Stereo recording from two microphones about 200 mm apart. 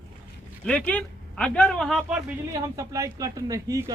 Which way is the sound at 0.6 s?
5° left (ahead or behind).